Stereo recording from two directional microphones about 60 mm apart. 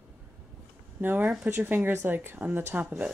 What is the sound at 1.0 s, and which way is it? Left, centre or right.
A woman's voice, right.